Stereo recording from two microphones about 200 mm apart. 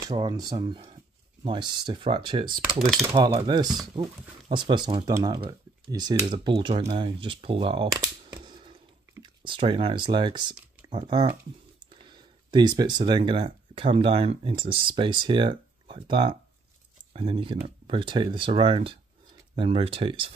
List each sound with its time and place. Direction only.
0.0 s speech: 20° right (ahead or behind)
2.4 s cutlery: 45° right (ahead or behind)
3.1 s speech: 20° right (ahead or behind)